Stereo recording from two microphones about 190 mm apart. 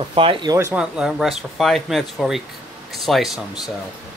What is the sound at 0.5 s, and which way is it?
Speech, 10° right (ahead or behind).